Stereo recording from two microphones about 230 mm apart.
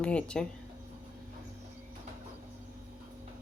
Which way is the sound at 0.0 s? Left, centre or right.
Centre.